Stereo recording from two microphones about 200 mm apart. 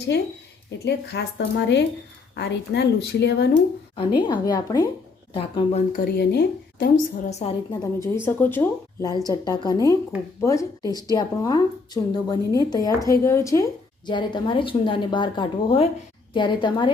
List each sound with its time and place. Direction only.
0.8 s speech: 55° left (ahead or behind)
3.9 s a woman's voice: 25° left (ahead or behind)
5.9 s a woman's voice: 50° left (ahead or behind)
7.3 s a woman's voice: 35° left (ahead or behind)
7.7 s a woman's voice: 20° left (ahead or behind)